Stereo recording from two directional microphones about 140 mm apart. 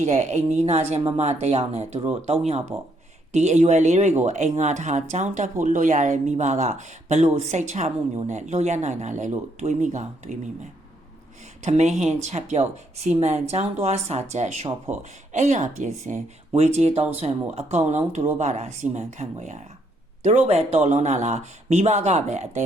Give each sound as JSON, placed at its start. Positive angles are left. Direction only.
{"t": 0.0, "sound": "speech", "side_deg": -55}
{"t": 16.6, "sound": "speech", "side_deg": -50}